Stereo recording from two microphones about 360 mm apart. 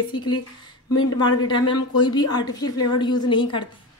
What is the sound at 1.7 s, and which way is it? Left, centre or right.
Speech, left.